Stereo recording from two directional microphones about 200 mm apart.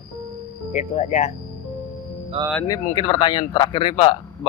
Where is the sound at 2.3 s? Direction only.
30° right (ahead or behind).